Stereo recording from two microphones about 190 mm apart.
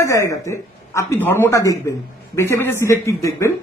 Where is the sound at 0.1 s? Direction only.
15° left (ahead or behind).